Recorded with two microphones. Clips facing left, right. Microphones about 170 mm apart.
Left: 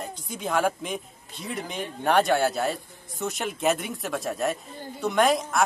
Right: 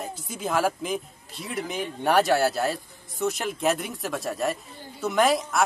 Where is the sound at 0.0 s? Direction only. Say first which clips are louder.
Right 1 dB; 5° right (ahead or behind).